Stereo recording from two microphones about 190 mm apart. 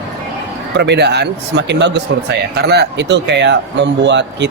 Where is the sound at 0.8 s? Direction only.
65° right (ahead or behind).